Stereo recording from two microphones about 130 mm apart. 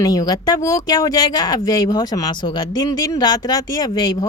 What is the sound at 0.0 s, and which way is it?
Speech, 30° left (ahead or behind).